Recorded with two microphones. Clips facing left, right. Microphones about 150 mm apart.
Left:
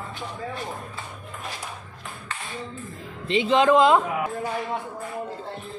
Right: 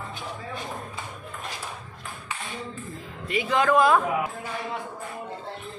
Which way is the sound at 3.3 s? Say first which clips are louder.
Left 4 dB; 20° left (ahead or behind).